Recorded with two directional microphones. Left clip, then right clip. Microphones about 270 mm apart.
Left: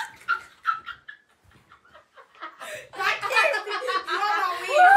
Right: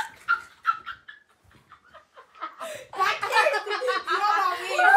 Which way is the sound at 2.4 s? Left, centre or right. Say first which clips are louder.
Right 2 dB; centre.